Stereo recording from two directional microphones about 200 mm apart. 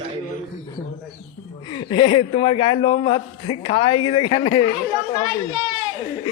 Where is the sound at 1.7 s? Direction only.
25° left (ahead or behind).